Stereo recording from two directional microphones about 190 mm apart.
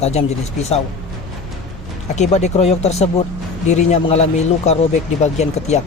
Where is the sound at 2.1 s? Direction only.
35° left (ahead or behind).